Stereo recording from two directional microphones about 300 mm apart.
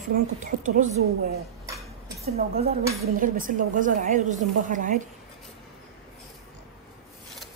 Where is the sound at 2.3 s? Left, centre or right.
Right.